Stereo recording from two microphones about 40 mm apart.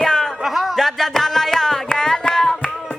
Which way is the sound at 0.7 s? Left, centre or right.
Centre.